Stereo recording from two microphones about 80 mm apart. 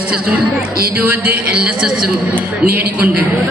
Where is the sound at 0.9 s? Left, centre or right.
Right.